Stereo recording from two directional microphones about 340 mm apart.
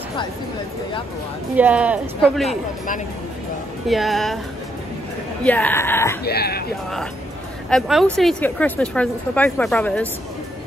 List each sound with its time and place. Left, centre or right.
1.6 s speech: centre
3.8 s speech: centre
5.4 s speech: centre
6.2 s speech: left
7.7 s speech: centre